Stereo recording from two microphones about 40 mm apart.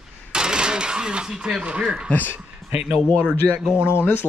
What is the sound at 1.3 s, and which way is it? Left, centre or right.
Speech, centre.